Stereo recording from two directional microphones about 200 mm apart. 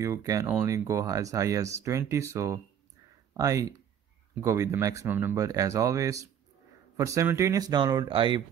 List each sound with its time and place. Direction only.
0.0 s speech: 15° right (ahead or behind)